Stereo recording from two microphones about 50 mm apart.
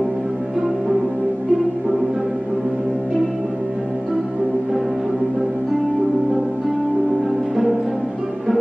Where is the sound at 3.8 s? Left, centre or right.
Centre.